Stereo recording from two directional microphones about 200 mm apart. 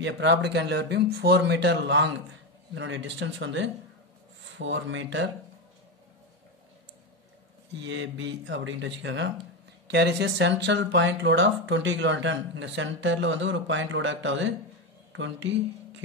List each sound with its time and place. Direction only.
0.0 s speech: 60° right (ahead or behind)
7.8 s speech: 70° right (ahead or behind)